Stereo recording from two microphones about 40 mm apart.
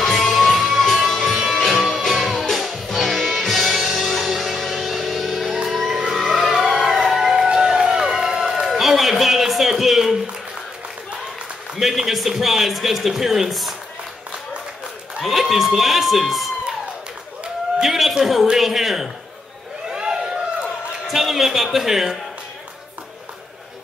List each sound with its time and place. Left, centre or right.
0.0 s music: centre
7.5 s run: centre
8.6 s a sound: centre
11.7 s a man's voice: centre
15.1 s speech: centre
17.8 s a man's voice: centre
19.9 s a sound: centre
21.1 s a man's voice: centre